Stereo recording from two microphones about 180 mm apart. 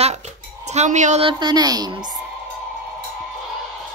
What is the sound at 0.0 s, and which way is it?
Dishes, 40° right (ahead or behind).